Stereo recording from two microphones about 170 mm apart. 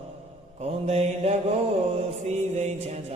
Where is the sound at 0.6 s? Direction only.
40° right (ahead or behind).